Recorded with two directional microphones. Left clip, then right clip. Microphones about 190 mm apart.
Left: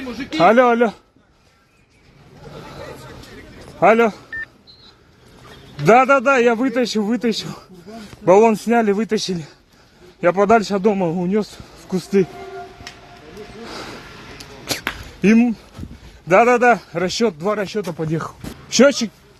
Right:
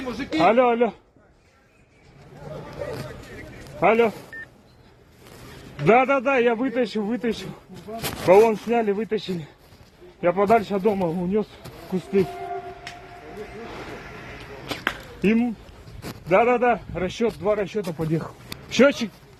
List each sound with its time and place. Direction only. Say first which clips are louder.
0.3 s a man's voice: left 5 dB; 40° left (ahead or behind)
3.8 s a man's voice: left 5 dB; 35° left (ahead or behind)
4.3 s a sound: left 9 dB; 30° left (ahead or behind)
5.7 s a man's voice: left 6 dB; 35° left (ahead or behind)
8.3 s a man's voice: left 3 dB; 45° left (ahead or behind)
15.2 s a man's voice: left 7 dB; 40° left (ahead or behind)